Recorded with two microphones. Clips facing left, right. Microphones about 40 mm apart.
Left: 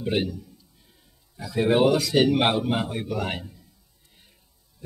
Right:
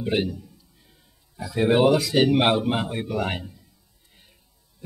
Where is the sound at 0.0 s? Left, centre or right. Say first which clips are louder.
Right 1 dB; centre.